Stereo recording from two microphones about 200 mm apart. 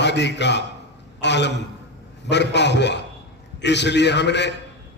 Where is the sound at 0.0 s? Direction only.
60° left (ahead or behind).